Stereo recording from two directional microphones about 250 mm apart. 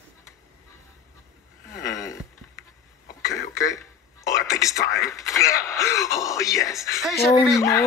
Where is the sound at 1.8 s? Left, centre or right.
Centre.